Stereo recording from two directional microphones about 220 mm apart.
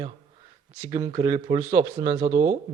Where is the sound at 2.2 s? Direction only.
35° right (ahead or behind).